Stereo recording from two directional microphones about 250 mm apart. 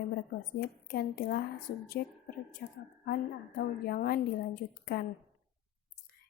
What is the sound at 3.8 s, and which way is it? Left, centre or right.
A woman's voice, left.